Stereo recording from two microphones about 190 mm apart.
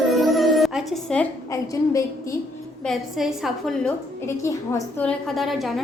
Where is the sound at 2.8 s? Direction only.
Centre (ahead or behind).